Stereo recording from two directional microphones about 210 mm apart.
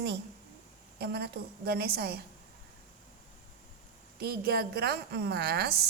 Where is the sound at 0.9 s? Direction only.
50° right (ahead or behind).